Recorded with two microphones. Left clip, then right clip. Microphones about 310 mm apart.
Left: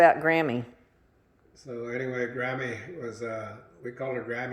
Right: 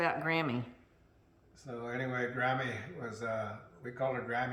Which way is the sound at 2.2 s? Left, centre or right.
Right.